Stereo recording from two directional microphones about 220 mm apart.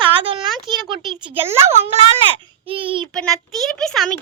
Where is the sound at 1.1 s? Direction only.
25° right (ahead or behind).